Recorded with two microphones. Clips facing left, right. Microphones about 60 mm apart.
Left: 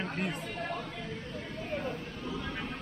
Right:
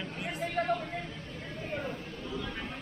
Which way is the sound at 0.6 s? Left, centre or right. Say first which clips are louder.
Right 9 dB; right.